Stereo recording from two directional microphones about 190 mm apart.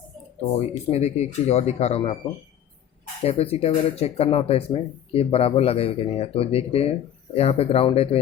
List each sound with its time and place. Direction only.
0.5 s speech: 35° left (ahead or behind)
3.2 s speech: 30° left (ahead or behind)